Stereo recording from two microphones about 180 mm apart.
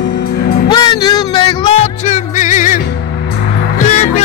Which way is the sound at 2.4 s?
45° left (ahead or behind).